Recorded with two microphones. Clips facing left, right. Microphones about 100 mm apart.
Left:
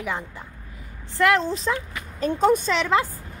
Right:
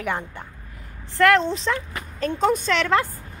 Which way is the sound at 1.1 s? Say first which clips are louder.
Right 3 dB; 5° left (ahead or behind).